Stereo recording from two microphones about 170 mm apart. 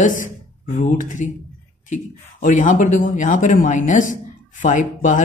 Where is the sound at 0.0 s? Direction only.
50° left (ahead or behind).